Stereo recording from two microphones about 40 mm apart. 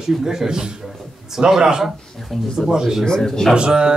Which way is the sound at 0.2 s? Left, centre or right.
Centre.